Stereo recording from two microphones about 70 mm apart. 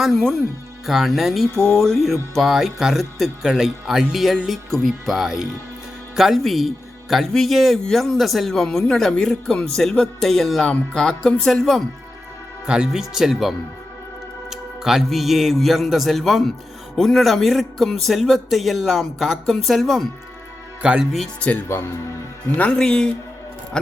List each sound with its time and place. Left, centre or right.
0.0 s speech: centre
12.6 s speech: centre
14.5 s speech: centre
21.7 s speech: left
22.5 s speech: left
22.8 s speech: centre